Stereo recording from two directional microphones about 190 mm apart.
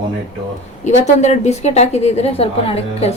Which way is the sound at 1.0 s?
35° left (ahead or behind).